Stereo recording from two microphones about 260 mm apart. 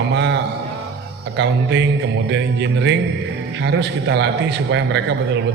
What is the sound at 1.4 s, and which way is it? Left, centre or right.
A man's voice, right.